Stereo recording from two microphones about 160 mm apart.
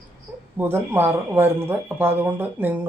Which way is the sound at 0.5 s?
15° right (ahead or behind).